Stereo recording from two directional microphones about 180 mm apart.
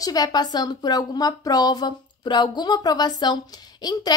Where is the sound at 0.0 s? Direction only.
20° left (ahead or behind).